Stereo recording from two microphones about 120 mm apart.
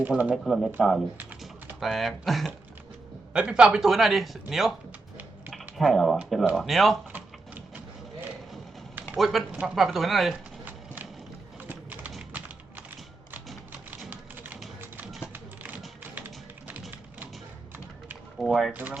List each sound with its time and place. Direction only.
0.0 s speech: 10° right (ahead or behind)
0.4 s speech: centre (ahead or behind)
1.2 s typing: 15° right (ahead or behind)
1.8 s speech: centre (ahead or behind)
5.7 s speech: centre (ahead or behind)
9.1 s a man's voice: centre (ahead or behind)
9.5 s speech: 10° right (ahead or behind)
9.7 s speech: centre (ahead or behind)
11.7 s clip-clop: 15° right (ahead or behind)
13.9 s typewriter: 15° right (ahead or behind)
14.8 s a sound: 15° right (ahead or behind)
16.1 s music: 15° right (ahead or behind)
18.3 s speech: centre (ahead or behind)
18.7 s speech: 15° right (ahead or behind)